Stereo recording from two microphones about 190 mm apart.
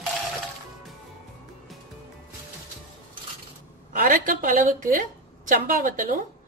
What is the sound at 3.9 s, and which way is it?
A woman's voice, 45° right (ahead or behind).